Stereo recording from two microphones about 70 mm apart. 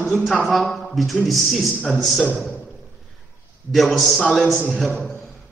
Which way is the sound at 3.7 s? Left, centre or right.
Centre.